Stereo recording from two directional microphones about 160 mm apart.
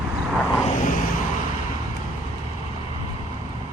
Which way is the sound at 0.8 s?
55° left (ahead or behind).